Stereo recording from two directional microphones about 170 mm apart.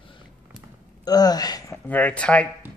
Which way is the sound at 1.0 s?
25° left (ahead or behind).